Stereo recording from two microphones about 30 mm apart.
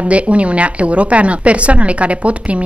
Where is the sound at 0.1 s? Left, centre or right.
Right.